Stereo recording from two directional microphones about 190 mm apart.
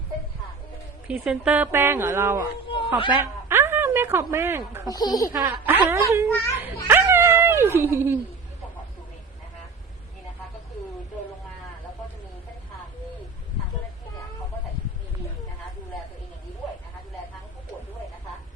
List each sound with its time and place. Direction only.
1.0 s speech: 5° right (ahead or behind)
2.6 s a sound: 25° left (ahead or behind)
3.1 s speech: 10° right (ahead or behind)
4.9 s speech: 20° left (ahead or behind)
5.3 s speech: 10° right (ahead or behind)
6.8 s dog: 10° right (ahead or behind)